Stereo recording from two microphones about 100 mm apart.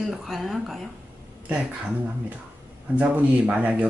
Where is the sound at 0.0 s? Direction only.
Centre (ahead or behind).